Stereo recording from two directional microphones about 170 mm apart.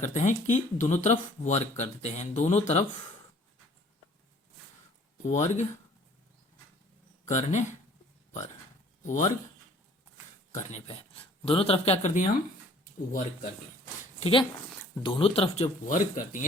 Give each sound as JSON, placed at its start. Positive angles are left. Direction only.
{"t": 0.0, "sound": "speech", "side_deg": 45}
{"t": 5.2, "sound": "speech", "side_deg": 45}
{"t": 7.3, "sound": "speech", "side_deg": 45}
{"t": 9.0, "sound": "speech", "side_deg": 45}
{"t": 10.5, "sound": "speech", "side_deg": 45}
{"t": 14.0, "sound": "a sound", "side_deg": 35}
{"t": 15.0, "sound": "speech", "side_deg": 30}
{"t": 15.9, "sound": "speech", "side_deg": 50}